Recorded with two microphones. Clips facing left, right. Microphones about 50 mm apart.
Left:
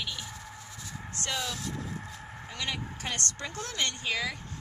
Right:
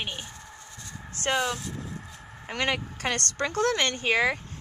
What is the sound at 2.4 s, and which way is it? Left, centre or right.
Speech, right.